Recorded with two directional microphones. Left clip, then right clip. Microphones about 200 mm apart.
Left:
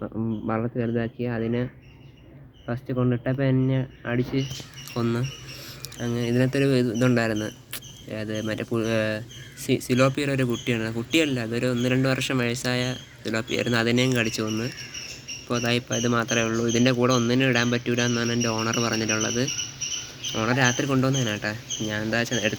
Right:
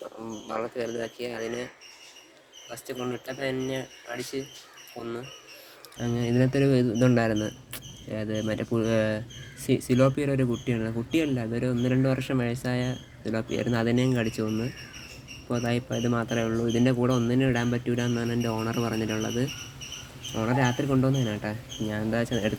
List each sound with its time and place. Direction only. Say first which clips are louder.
0.3 s speech: left 3 dB; 15° right (ahead or behind)
2.7 s speech: left 6 dB; 10° right (ahead or behind)